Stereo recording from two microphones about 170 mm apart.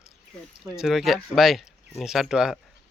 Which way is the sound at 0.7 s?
Centre (ahead or behind).